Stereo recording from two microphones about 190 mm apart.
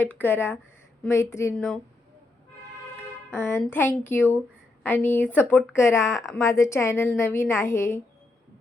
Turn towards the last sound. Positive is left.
turn(degrees=15)  # may be behind; listen again after turning